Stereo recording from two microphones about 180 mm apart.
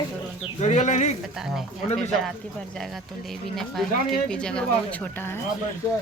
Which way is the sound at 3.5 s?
Centre (ahead or behind).